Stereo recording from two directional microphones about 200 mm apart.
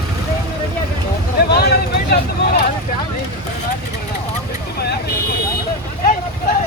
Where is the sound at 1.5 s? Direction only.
50° left (ahead or behind).